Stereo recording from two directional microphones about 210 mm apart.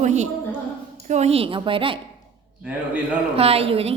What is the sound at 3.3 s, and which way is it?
Speech, 30° right (ahead or behind).